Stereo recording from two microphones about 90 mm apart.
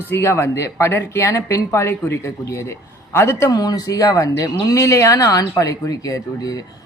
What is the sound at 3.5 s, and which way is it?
Speech, 45° left (ahead or behind).